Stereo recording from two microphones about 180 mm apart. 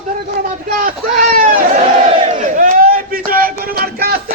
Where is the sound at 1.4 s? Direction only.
50° right (ahead or behind).